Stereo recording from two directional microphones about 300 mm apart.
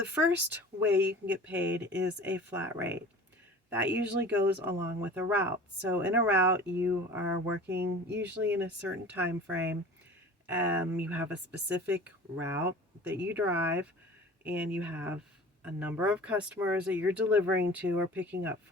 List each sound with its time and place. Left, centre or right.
0.1 s speech: centre
7.7 s speech: right
8.2 s speech: centre